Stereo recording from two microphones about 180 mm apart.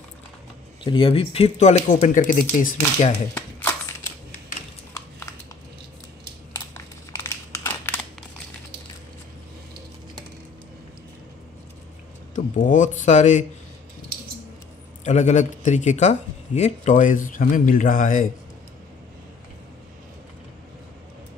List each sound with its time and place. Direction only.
0.8 s speech: 30° left (ahead or behind); by 3.1 s 45° left (ahead or behind)
3.3 s a sound: 10° left (ahead or behind)
6.6 s crumpling: 15° left (ahead or behind)
12.4 s speech: 45° left (ahead or behind)
15.0 s speech: 40° left (ahead or behind)